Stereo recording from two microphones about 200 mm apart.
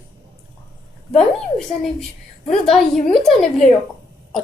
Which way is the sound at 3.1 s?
Centre (ahead or behind).